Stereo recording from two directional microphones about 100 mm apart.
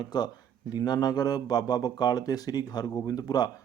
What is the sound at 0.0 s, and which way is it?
Speech, 45° left (ahead or behind).